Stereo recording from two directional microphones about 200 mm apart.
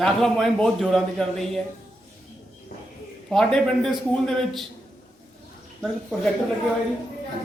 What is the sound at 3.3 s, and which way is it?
Speech, centre (ahead or behind).